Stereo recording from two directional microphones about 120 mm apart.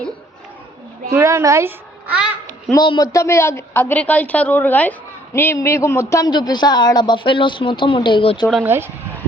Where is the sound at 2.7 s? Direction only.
35° left (ahead or behind).